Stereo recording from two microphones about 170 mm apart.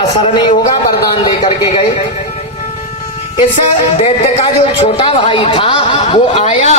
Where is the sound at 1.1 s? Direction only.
30° left (ahead or behind).